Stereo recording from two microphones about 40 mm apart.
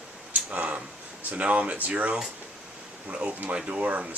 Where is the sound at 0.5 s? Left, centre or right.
Right.